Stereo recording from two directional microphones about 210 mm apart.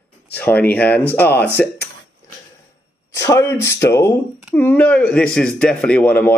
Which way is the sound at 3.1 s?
15° left (ahead or behind).